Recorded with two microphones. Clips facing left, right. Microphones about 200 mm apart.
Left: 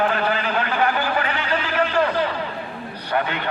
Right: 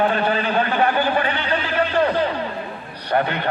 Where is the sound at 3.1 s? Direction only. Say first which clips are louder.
Right 3 dB; 40° right (ahead or behind).